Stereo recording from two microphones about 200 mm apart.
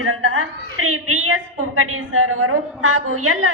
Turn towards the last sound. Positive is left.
turn(degrees=-90)